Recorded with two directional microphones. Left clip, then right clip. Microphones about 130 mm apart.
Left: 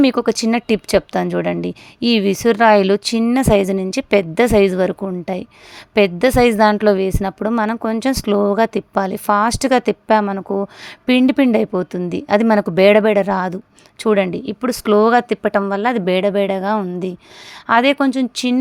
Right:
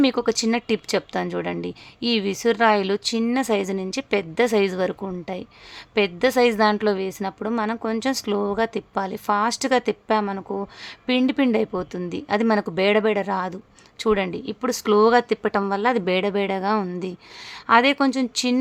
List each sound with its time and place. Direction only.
0.0 s a woman's voice: 40° left (ahead or behind)